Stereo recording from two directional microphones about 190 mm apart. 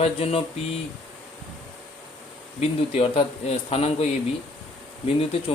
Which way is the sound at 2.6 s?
30° left (ahead or behind).